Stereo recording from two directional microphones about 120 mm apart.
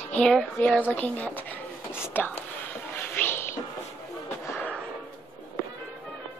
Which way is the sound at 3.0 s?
15° left (ahead or behind).